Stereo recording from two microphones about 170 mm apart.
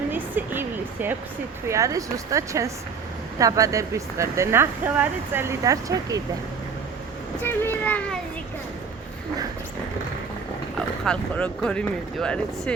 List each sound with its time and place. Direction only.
0.1 s a sound: 10° right (ahead or behind)
1.6 s speech: 20° right (ahead or behind)
7.4 s a child's voice: 10° left (ahead or behind)
11.0 s speech: 5° left (ahead or behind)